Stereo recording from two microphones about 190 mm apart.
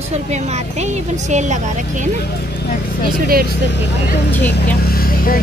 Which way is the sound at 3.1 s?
50° right (ahead or behind).